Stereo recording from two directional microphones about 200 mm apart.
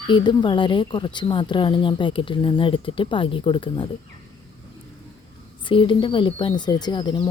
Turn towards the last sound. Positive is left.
turn(degrees=25)  # may be behind; listen again after turning